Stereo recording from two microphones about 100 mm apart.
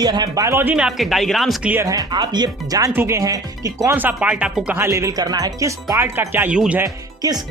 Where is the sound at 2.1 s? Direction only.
45° right (ahead or behind).